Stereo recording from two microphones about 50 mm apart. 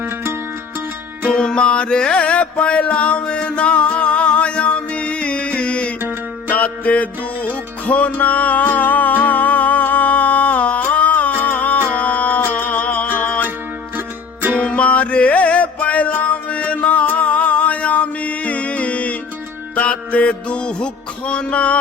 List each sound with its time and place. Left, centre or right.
1.3 s music: centre; by 13.5 s left
14.6 s music: left